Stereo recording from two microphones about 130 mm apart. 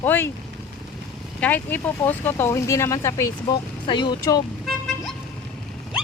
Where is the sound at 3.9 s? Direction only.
35° left (ahead or behind).